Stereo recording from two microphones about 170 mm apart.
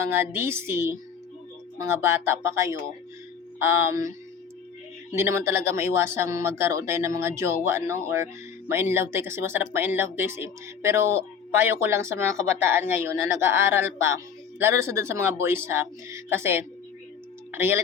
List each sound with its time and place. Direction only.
0.1 s speech: 15° right (ahead or behind)
5.1 s speech: 15° right (ahead or behind)